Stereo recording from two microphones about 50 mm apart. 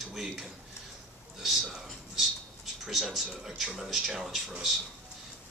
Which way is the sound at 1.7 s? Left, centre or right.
Centre.